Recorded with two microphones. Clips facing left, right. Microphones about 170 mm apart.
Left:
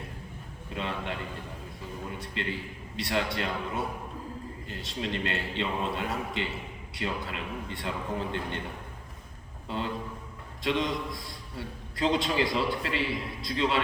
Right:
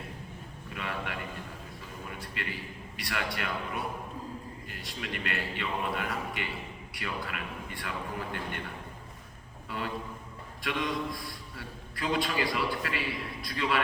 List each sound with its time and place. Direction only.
0.7 s a man's voice: 25° left (ahead or behind)
9.6 s a man's voice: 25° left (ahead or behind)